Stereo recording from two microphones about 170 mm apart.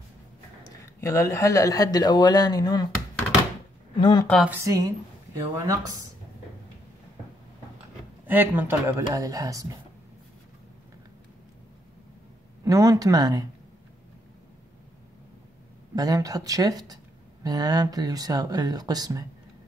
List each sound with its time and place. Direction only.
0.7 s speech: 20° left (ahead or behind)
3.9 s speech: 25° left (ahead or behind)
4.5 s speech: 20° right (ahead or behind)
8.3 s speech: 10° right (ahead or behind)
12.6 s speech: 20° right (ahead or behind)
15.9 s speech: 20° right (ahead or behind)